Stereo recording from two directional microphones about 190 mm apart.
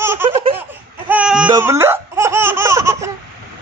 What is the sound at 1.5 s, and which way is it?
Laughter, 15° right (ahead or behind).